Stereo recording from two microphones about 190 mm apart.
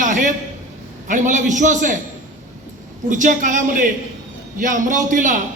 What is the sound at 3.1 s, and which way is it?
A man's voice, 40° right (ahead or behind).